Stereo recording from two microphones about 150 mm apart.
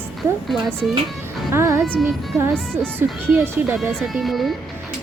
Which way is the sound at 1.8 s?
5° left (ahead or behind).